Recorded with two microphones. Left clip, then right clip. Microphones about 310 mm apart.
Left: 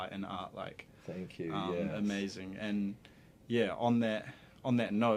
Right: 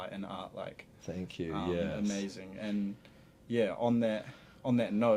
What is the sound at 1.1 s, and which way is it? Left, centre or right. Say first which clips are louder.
Speech: right 2 dB; right.